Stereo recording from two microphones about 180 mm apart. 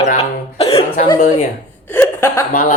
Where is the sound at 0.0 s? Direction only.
35° left (ahead or behind).